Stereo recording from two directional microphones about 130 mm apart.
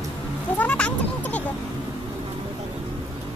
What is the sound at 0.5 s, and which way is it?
Sheep, 10° left (ahead or behind).